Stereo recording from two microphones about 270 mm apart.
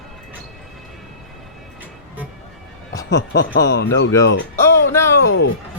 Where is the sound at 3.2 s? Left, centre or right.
Left.